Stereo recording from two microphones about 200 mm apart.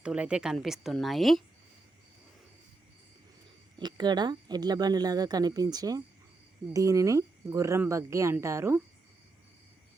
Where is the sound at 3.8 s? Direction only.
20° right (ahead or behind).